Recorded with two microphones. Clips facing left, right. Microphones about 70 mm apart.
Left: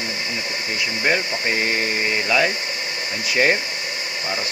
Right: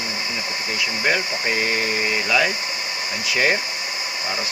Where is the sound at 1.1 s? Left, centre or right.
Centre.